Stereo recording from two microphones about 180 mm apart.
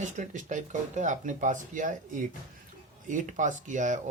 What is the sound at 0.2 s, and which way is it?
Speech, 45° right (ahead or behind).